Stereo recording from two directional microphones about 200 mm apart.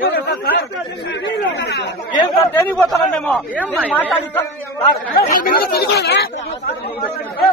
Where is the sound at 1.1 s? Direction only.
55° left (ahead or behind).